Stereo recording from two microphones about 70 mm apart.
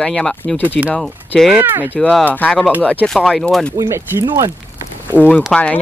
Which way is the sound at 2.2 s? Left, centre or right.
Left.